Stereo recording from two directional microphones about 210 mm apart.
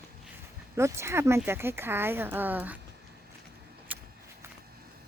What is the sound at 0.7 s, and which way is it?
Speech, 15° right (ahead or behind).